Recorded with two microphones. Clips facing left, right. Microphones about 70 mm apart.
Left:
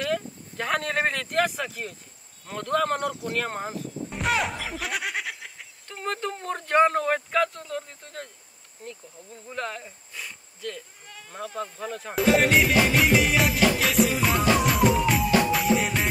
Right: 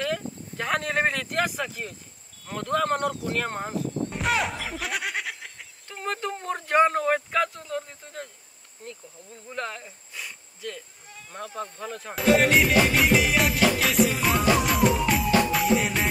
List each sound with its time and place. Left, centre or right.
0.0 s a sound: centre
2.4 s speech: centre
9.5 s insect: centre
11.1 s insect: left
11.3 s speech: centre